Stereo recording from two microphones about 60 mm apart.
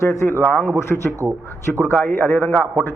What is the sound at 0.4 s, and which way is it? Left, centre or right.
Speech, left.